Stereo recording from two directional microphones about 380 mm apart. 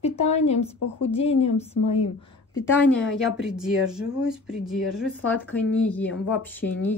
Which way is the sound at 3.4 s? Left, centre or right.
Centre.